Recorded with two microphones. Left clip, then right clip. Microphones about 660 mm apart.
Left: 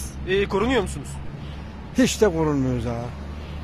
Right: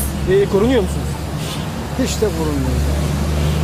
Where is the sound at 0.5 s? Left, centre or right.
Left.